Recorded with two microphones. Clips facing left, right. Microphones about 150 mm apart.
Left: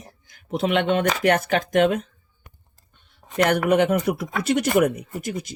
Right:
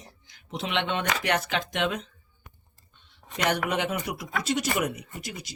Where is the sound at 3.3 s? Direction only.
50° left (ahead or behind).